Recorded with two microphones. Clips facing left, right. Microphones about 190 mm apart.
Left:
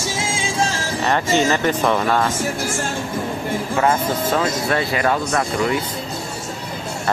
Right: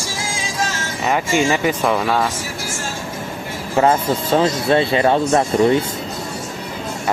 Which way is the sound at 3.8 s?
30° right (ahead or behind).